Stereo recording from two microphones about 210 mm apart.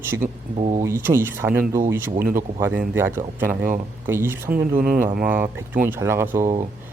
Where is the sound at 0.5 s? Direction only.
30° right (ahead or behind).